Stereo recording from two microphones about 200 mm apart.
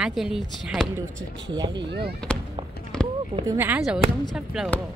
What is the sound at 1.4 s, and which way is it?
Speech, 20° right (ahead or behind).